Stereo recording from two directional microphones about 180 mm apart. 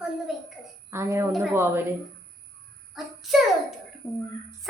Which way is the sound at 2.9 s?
Centre (ahead or behind).